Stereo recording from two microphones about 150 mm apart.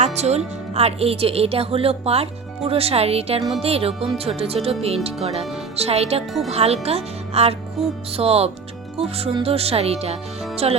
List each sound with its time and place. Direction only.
0.0 s a woman's voice: 45° right (ahead or behind)